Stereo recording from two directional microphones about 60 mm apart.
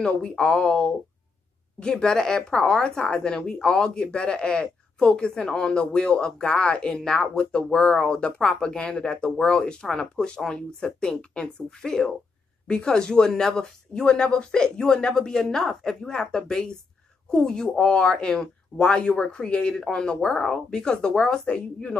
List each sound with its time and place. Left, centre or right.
0.0 s speech: centre